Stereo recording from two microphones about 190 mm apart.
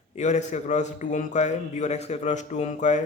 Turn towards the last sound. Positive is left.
turn(degrees=40)  # may be behind; listen again after turning